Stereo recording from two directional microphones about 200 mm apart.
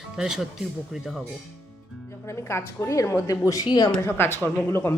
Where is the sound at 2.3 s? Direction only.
15° left (ahead or behind).